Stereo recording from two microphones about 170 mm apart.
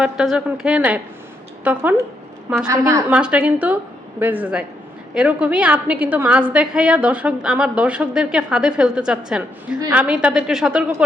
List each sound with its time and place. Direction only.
0.0 s a woman's voice: centre (ahead or behind); by 3.0 s 20° right (ahead or behind)
3.1 s a woman's voice: 5° right (ahead or behind)